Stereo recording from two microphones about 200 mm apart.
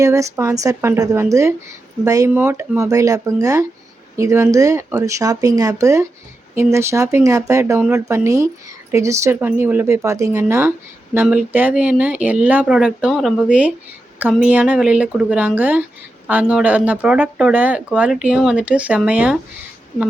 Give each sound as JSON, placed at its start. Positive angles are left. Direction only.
{"t": 0.0, "sound": "speech", "side_deg": -15}